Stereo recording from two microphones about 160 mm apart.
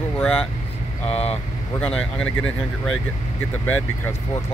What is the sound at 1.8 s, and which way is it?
Speech, 5° left (ahead or behind).